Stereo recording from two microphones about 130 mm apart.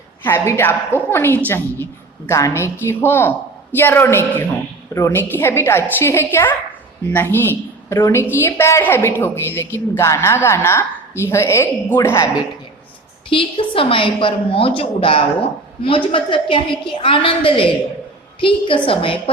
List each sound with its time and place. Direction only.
0.2 s a woman's voice: 15° left (ahead or behind)
13.3 s a woman's voice: 45° left (ahead or behind)